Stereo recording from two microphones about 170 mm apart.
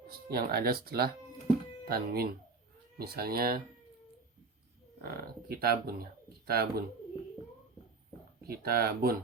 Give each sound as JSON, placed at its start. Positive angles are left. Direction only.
{"t": 0.1, "sound": "speech", "side_deg": -65}
{"t": 5.0, "sound": "speech", "side_deg": -65}
{"t": 8.4, "sound": "speech", "side_deg": -65}